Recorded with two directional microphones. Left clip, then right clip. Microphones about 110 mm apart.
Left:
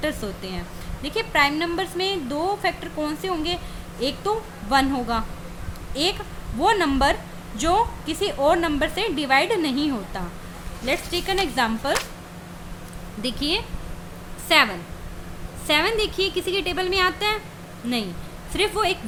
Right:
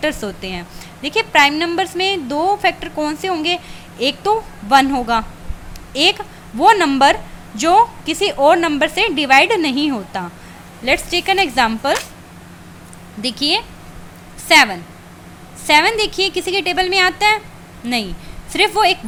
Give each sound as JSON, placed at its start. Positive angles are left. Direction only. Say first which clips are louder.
{"t": 0.0, "sound": "a woman's voice", "louder": "right 7 dB", "side_deg": -30}
{"t": 13.2, "sound": "a woman's voice", "louder": "right 7 dB", "side_deg": -25}